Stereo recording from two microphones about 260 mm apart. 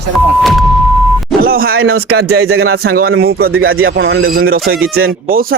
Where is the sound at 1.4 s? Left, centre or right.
Right.